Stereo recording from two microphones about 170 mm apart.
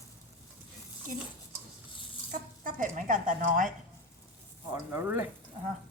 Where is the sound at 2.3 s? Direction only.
50° right (ahead or behind).